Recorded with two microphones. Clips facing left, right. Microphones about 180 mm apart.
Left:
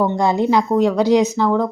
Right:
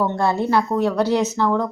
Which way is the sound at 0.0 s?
15° left (ahead or behind).